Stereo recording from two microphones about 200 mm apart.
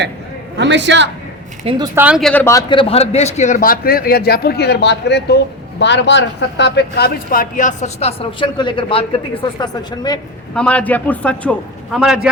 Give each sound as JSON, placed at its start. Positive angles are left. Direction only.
{"t": 0.5, "sound": "a man's voice", "side_deg": -60}
{"t": 1.7, "sound": "speech", "side_deg": -30}
{"t": 2.0, "sound": "a man's voice", "side_deg": -5}
{"t": 2.3, "sound": "a man's voice", "side_deg": 15}
{"t": 10.5, "sound": "a man's voice", "side_deg": 5}